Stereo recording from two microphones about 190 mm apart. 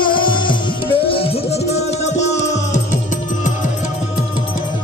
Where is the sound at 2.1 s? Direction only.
70° left (ahead or behind).